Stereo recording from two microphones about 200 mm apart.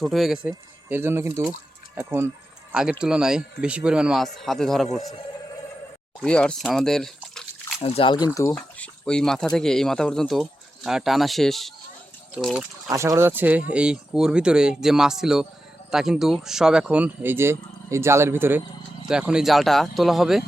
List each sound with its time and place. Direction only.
0.0 s speech: centre (ahead or behind)
6.2 s speech: 5° left (ahead or behind)
7.8 s speech: 30° left (ahead or behind)
8.5 s speech: 5° left (ahead or behind)
12.9 s speech: 15° right (ahead or behind)